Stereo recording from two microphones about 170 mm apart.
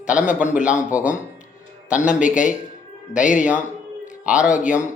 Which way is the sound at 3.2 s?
50° left (ahead or behind).